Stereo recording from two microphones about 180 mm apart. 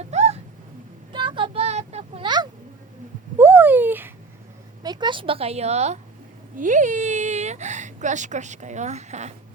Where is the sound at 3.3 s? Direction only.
10° right (ahead or behind).